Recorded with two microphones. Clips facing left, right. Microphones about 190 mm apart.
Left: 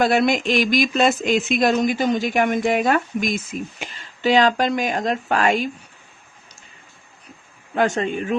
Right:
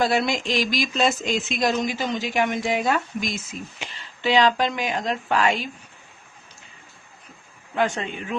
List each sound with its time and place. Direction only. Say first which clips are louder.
0.0 s speech: left 4 dB; 55° left (ahead or behind)
7.8 s speech: left 4 dB; 45° left (ahead or behind)